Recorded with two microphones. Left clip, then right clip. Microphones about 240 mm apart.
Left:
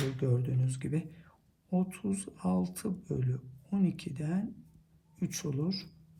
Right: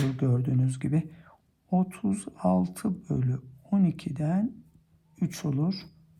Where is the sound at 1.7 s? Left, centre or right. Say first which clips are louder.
Right 5 dB; right.